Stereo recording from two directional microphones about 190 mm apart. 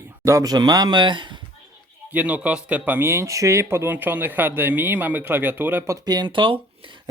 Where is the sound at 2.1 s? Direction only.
10° right (ahead or behind).